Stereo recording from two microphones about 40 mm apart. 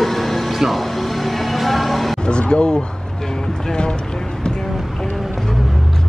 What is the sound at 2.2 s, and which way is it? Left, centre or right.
Speech, left.